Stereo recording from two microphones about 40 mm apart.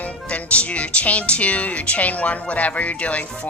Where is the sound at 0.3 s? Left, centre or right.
Left.